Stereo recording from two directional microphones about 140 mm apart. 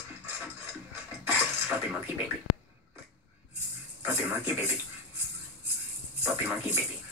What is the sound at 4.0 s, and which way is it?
Speech, 15° right (ahead or behind).